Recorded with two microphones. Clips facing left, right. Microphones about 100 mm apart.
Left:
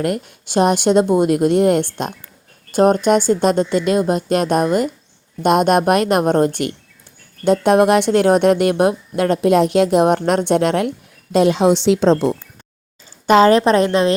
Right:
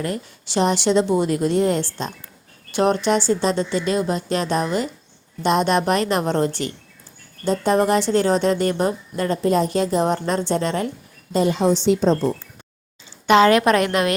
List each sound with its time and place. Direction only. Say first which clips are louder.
0.0 s a woman's voice: left 6 dB; 60° left (ahead or behind)
2.7 s a woman's voice: left 5 dB; 45° left (ahead or behind)
7.4 s a woman's voice: left 6 dB; 70° left (ahead or behind); by 12.3 s 90° left
13.2 s a woman's voice: left 3 dB; 35° left (ahead or behind)